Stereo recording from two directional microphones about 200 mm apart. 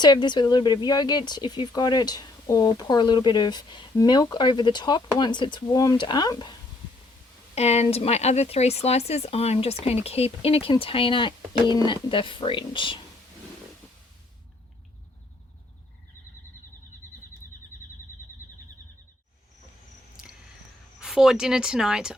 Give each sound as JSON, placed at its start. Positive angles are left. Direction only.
{"t": 0.0, "sound": "speech", "side_deg": 20}
{"t": 7.5, "sound": "speech", "side_deg": 30}
{"t": 21.0, "sound": "speech", "side_deg": -5}